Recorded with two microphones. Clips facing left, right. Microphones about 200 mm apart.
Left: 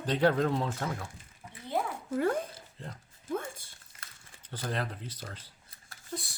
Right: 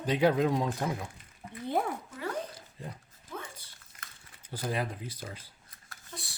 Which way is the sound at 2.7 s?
10° right (ahead or behind).